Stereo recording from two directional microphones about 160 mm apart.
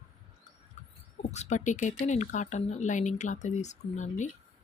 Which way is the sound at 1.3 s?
45° left (ahead or behind).